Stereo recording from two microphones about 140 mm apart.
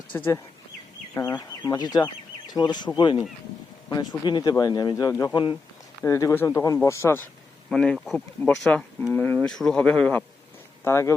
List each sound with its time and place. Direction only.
0.1 s speech: 20° left (ahead or behind); by 5.5 s 35° left (ahead or behind)
6.0 s speech: 20° left (ahead or behind)
7.7 s speech: 5° left (ahead or behind)